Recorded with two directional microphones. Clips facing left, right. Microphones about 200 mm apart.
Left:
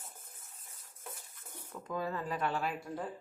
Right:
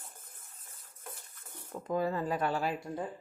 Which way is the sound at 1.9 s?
40° right (ahead or behind).